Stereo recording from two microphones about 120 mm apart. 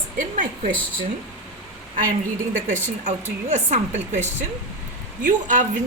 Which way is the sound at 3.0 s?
80° right.